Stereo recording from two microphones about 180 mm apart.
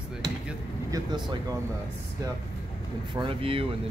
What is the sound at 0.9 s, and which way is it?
Speech, 20° right (ahead or behind).